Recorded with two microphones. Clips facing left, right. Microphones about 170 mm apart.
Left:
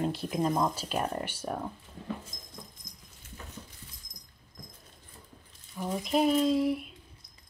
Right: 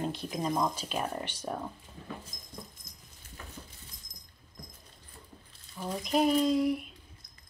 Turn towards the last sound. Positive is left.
turn(degrees=0)  # may be behind; listen again after turning